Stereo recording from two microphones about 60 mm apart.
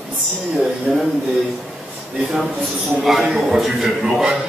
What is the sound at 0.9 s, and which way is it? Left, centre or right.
Speech, centre.